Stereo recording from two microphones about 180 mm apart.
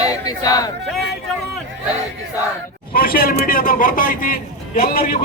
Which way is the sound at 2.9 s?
55° left (ahead or behind).